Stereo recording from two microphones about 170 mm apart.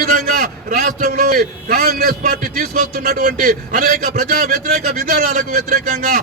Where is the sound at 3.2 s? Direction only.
50° right (ahead or behind).